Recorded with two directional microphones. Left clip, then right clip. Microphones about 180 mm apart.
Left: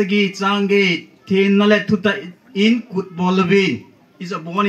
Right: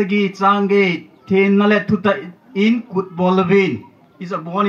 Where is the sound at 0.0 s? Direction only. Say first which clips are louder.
Right 2 dB; 25° right (ahead or behind).